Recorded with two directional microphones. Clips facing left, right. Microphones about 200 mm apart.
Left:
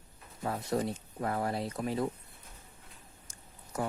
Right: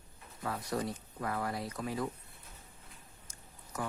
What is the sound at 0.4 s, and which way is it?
Speech, 25° left (ahead or behind).